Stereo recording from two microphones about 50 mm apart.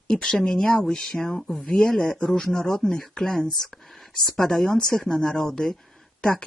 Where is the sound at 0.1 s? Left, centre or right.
Centre.